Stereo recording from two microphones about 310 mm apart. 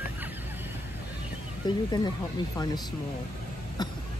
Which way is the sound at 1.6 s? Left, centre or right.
Centre.